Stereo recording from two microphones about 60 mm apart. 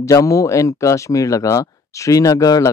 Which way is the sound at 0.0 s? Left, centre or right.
Left.